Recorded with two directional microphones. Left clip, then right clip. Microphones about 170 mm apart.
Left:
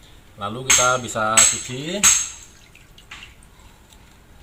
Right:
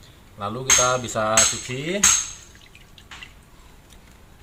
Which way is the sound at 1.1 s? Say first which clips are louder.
Left 2 dB; 15° right (ahead or behind).